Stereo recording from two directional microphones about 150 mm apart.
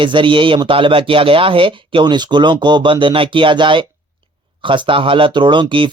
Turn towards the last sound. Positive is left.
turn(degrees=-35)  # may be behind; listen again after turning